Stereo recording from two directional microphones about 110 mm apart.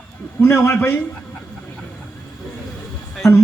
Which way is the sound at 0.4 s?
25° left (ahead or behind).